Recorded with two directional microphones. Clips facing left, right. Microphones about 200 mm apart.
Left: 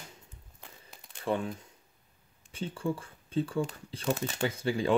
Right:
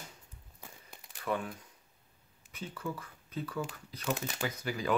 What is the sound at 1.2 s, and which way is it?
Speech, 25° left (ahead or behind).